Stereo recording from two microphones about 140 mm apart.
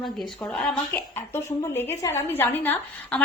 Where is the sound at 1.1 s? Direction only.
15° left (ahead or behind).